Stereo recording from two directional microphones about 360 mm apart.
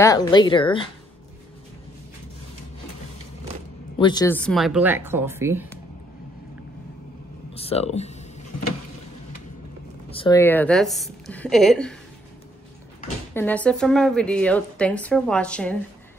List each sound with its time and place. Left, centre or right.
0.0 s speech: centre
4.0 s a woman's voice: centre
7.5 s speech: centre
10.0 s a woman's voice: centre
13.3 s a woman's voice: centre